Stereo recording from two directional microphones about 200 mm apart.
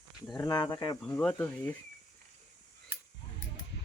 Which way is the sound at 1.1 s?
10° left (ahead or behind).